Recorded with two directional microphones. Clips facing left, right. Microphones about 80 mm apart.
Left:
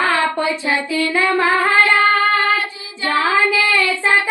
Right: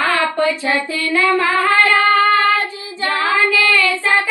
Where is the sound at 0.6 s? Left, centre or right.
Left.